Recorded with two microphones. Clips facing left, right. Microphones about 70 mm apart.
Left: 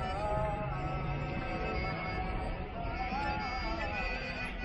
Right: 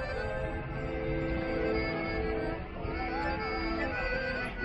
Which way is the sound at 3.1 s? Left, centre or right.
Right.